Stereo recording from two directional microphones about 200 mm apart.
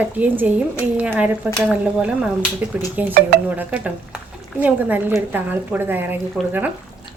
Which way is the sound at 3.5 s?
10° right (ahead or behind).